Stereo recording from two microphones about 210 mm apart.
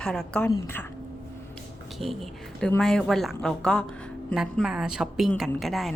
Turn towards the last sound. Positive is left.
turn(degrees=0)  # may be behind; listen again after turning